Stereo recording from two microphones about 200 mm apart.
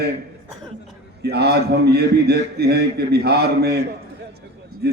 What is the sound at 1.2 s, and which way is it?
A man's voice, 55° right (ahead or behind).